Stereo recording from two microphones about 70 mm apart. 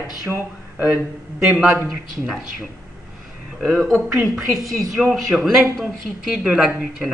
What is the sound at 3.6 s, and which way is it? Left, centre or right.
Speech, centre.